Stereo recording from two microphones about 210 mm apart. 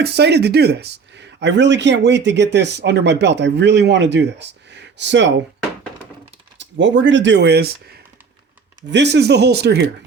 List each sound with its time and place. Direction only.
0.0 s speech: 55° right (ahead or behind)
6.6 s speech: 60° right (ahead or behind)